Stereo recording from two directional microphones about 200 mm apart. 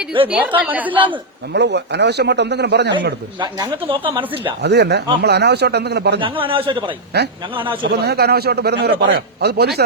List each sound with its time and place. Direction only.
0.3 s speech: 5° right (ahead or behind)
1.5 s speech: 60° right (ahead or behind)
3.4 s speech: 25° right (ahead or behind)
4.6 s speech: 55° right (ahead or behind)
6.1 s speech: 25° right (ahead or behind)
7.1 s a man's voice: 55° right (ahead or behind)
7.5 s speech: 25° right (ahead or behind)
7.9 s a man's voice: 55° right (ahead or behind)